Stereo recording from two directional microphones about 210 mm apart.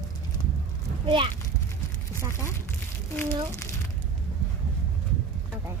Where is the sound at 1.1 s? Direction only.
25° right (ahead or behind).